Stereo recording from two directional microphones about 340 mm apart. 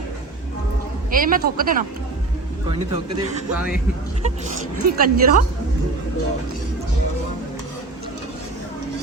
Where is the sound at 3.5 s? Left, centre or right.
Centre.